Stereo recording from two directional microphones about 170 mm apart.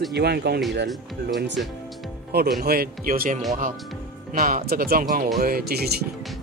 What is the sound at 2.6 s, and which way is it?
Speech, 60° right (ahead or behind).